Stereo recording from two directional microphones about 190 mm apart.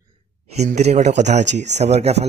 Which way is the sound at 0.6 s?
35° right (ahead or behind).